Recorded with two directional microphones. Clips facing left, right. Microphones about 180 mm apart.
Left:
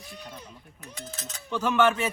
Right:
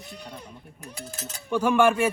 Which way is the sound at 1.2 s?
10° right (ahead or behind).